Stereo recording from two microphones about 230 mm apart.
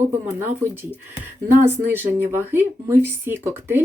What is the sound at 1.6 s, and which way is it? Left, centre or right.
Speech, centre.